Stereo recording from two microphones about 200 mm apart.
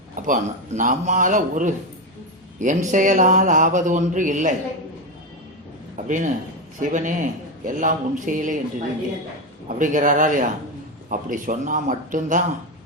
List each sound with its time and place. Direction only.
0.2 s mantra: 40° right (ahead or behind)
6.0 s a man's voice: 40° right (ahead or behind)
6.7 s mantra: 40° right (ahead or behind)
9.6 s mantra: 40° right (ahead or behind)